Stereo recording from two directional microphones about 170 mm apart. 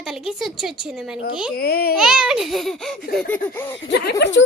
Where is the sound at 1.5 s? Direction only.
65° left (ahead or behind).